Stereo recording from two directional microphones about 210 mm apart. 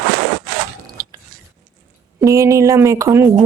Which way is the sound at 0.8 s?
15° right (ahead or behind).